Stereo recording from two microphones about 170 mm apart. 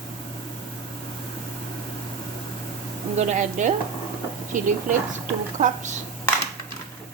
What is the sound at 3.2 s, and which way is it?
A woman's voice, 45° right (ahead or behind).